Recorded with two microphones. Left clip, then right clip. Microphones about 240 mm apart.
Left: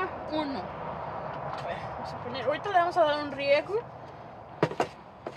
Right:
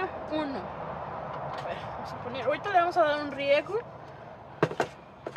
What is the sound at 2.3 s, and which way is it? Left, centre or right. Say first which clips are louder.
Speech: even; centre.